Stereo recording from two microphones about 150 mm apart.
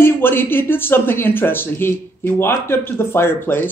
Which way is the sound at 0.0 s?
15° left (ahead or behind).